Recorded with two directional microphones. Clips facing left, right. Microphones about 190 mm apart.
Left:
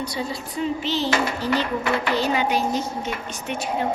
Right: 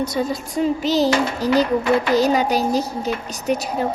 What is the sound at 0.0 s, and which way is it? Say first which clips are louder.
A woman's voice: right 6 dB; 45° right (ahead or behind).